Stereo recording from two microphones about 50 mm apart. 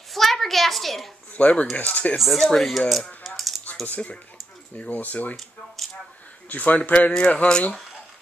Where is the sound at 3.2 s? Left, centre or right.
Centre.